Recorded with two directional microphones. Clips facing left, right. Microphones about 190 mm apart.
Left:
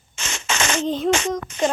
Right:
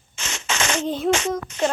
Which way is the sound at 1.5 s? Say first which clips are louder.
Left 2 dB; 50° left (ahead or behind).